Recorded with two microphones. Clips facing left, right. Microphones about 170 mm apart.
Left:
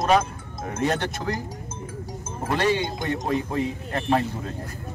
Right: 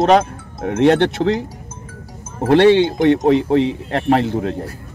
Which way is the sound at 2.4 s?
75° right (ahead or behind).